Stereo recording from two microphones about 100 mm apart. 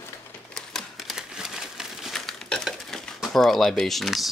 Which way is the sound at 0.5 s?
Centre (ahead or behind).